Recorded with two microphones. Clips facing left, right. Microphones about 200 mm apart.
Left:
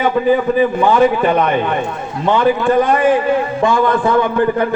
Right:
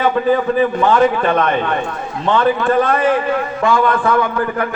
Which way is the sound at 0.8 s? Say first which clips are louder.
Left 1 dB; 10° left (ahead or behind).